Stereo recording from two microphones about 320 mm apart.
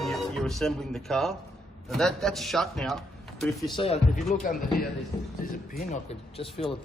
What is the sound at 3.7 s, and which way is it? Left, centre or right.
Speech, centre.